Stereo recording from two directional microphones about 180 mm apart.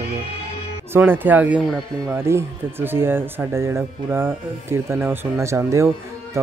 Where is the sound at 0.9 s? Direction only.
10° right (ahead or behind).